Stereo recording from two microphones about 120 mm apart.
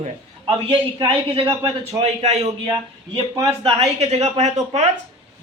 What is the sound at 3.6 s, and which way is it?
A woman's voice, 60° right (ahead or behind).